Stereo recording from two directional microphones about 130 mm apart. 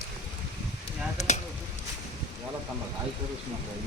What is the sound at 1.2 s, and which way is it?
Chop, 60° left (ahead or behind).